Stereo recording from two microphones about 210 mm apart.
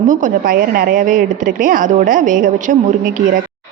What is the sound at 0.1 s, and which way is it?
A woman's voice, 40° right (ahead or behind).